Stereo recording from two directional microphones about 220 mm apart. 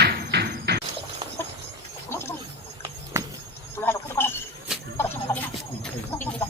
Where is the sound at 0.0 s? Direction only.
50° right (ahead or behind).